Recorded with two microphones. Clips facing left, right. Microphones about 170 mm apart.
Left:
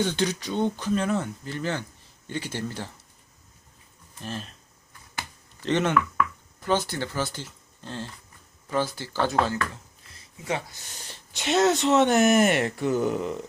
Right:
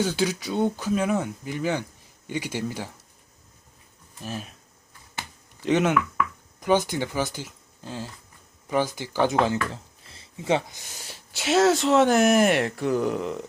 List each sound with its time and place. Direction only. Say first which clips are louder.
0.0 s speech: right 1 dB; 5° right (ahead or behind)
4.2 s speech: right 1 dB; 5° right (ahead or behind)
5.6 s speech: right 2 dB; 10° right (ahead or behind)
9.7 s a sound: right 5 dB; 30° right (ahead or behind)
10.9 s speech: right 1 dB; 10° right (ahead or behind)